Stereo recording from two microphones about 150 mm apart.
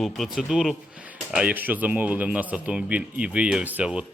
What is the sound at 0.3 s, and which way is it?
A man's voice, 5° right (ahead or behind).